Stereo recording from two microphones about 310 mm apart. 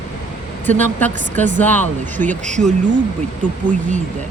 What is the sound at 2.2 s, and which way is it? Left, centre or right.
Speech, right.